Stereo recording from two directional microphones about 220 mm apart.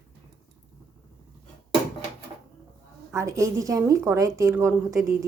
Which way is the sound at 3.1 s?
15° right (ahead or behind).